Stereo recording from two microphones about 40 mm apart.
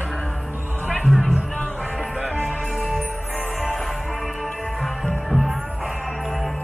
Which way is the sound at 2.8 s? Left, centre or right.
Centre.